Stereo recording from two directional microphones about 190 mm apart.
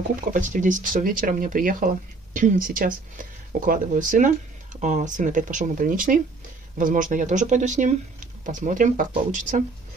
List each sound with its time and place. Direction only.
0.1 s speech: 45° right (ahead or behind)